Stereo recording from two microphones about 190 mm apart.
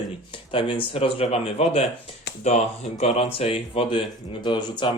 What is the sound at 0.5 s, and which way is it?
Speech, 30° left (ahead or behind).